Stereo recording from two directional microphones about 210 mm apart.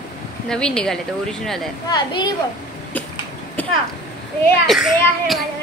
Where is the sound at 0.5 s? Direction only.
5° left (ahead or behind).